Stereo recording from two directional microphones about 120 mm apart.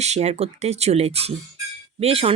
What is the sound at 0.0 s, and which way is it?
Speech, 65° right (ahead or behind).